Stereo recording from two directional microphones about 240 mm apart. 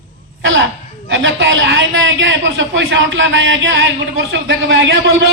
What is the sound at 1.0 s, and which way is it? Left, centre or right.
A woman's voice, right.